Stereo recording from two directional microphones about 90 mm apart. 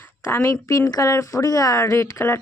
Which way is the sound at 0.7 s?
40° left (ahead or behind).